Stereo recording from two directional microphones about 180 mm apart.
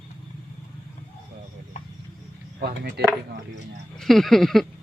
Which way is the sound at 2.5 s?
70° right (ahead or behind).